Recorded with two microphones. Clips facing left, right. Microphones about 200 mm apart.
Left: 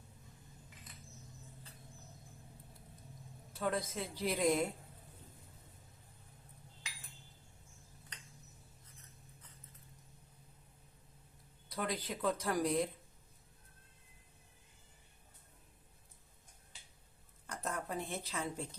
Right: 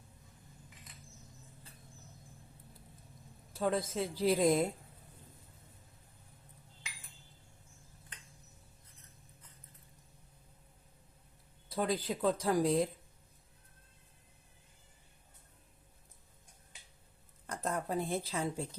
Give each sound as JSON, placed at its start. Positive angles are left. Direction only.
{"t": 3.6, "sound": "a woman's voice", "side_deg": -30}
{"t": 11.7, "sound": "speech", "side_deg": -30}
{"t": 17.4, "sound": "a sound", "side_deg": -35}